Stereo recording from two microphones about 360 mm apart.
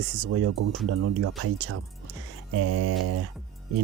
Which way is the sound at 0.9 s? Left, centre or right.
Right.